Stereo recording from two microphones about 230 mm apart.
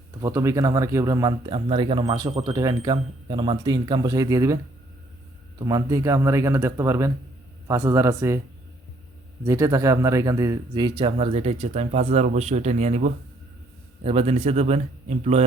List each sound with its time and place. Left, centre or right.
0.2 s speech: centre
5.5 s speech: centre
9.5 s speech: centre